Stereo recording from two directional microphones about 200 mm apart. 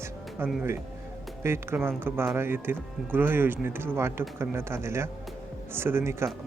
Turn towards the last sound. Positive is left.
turn(degrees=-10)  # may be behind; listen again after turning